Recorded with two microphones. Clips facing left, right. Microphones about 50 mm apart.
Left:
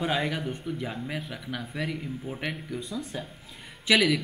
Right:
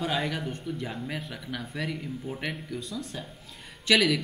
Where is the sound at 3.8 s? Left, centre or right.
Centre.